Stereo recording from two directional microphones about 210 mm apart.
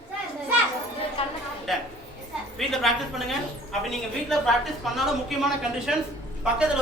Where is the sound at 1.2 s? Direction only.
25° left (ahead or behind).